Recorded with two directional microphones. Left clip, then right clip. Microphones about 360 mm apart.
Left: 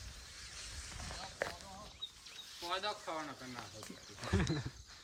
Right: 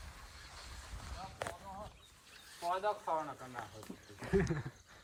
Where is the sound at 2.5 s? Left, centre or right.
Centre.